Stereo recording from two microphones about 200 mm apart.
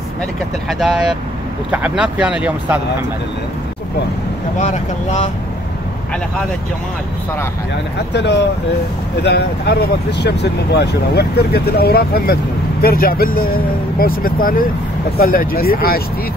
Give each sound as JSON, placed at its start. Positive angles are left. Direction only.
{"t": 0.7, "sound": "speech", "side_deg": 0}
{"t": 4.6, "sound": "speech", "side_deg": 40}
{"t": 8.1, "sound": "speech", "side_deg": 60}